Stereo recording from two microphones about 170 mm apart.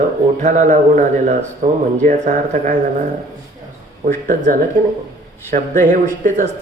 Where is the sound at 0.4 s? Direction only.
45° right (ahead or behind).